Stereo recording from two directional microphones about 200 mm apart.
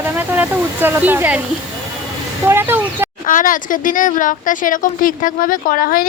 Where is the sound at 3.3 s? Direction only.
40° left (ahead or behind).